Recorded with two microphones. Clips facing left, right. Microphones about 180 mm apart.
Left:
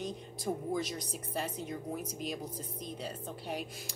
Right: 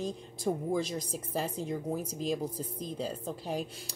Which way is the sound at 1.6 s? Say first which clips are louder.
Right 5 dB; 30° right (ahead or behind).